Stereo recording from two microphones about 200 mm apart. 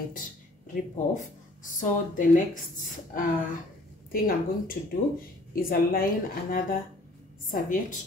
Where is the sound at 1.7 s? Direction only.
40° left (ahead or behind).